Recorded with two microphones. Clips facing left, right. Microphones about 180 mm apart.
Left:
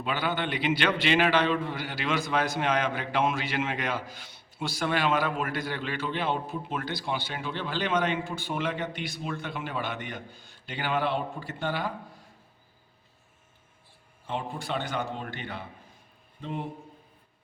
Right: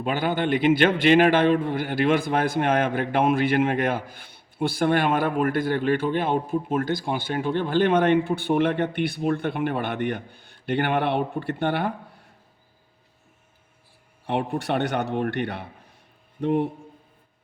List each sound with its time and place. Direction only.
0.0 s a man's voice: 50° right (ahead or behind)
14.3 s a man's voice: 65° right (ahead or behind)